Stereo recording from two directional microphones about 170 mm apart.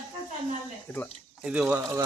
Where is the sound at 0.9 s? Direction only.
10° left (ahead or behind).